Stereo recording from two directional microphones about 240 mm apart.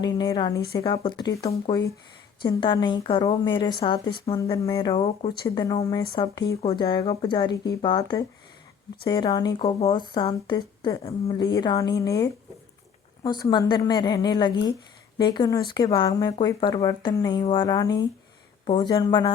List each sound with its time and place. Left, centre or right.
0.0 s a woman's voice: centre